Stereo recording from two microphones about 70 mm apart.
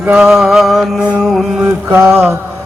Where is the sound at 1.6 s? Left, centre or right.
Right.